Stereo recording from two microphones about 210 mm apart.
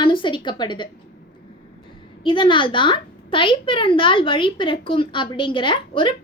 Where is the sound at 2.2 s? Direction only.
25° left (ahead or behind).